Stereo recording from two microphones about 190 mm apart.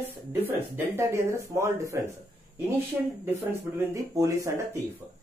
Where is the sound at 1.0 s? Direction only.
15° right (ahead or behind).